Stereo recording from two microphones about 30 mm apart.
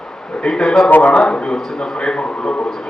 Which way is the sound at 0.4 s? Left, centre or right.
Centre.